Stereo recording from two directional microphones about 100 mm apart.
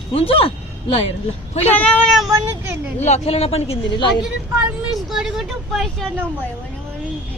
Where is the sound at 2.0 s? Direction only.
Centre (ahead or behind).